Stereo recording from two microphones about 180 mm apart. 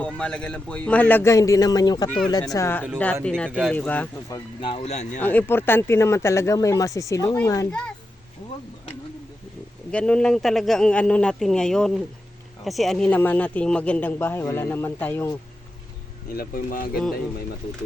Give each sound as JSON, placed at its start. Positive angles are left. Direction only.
{"t": 0.0, "sound": "speech", "side_deg": 5}
{"t": 4.6, "sound": "speech", "side_deg": 35}
{"t": 5.2, "sound": "speech", "side_deg": 10}
{"t": 7.7, "sound": "a man's voice", "side_deg": 5}
{"t": 9.9, "sound": "a man's voice", "side_deg": 5}
{"t": 16.3, "sound": "speech", "side_deg": 55}